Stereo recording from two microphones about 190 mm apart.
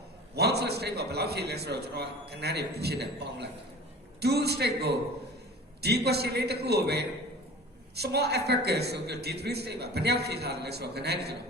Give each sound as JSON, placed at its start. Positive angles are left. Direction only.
{"t": 0.3, "sound": "a man's voice", "side_deg": -60}